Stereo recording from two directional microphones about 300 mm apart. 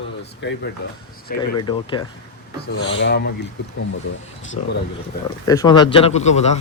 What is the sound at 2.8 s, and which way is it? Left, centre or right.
Speech, left.